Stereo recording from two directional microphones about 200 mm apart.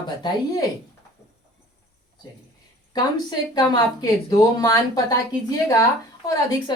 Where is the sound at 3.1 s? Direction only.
20° left (ahead or behind).